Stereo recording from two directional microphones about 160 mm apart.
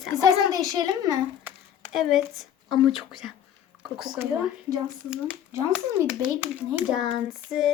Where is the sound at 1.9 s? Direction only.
Centre (ahead or behind).